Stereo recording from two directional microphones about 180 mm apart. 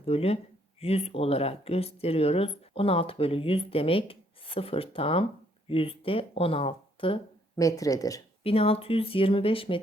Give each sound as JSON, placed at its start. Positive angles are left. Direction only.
{"t": 0.0, "sound": "speech", "side_deg": 35}
{"t": 8.4, "sound": "speech", "side_deg": 30}